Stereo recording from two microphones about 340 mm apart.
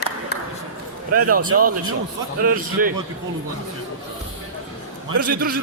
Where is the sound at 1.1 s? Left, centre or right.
Right.